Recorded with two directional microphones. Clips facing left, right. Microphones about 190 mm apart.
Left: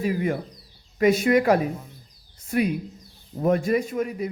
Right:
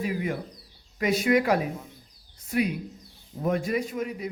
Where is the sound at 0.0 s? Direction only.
45° left (ahead or behind).